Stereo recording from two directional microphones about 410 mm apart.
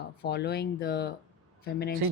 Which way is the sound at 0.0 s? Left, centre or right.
Left.